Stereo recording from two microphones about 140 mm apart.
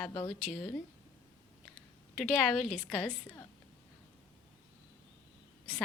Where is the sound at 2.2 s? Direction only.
Centre (ahead or behind).